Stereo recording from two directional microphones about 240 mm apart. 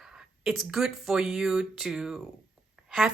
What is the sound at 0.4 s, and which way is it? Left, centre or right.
Speech, centre.